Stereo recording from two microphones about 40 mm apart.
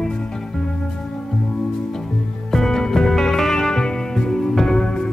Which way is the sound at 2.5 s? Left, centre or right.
Centre.